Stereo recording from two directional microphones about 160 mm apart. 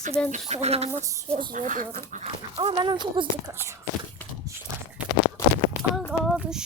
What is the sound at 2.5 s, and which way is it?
Speech, 35° right (ahead or behind).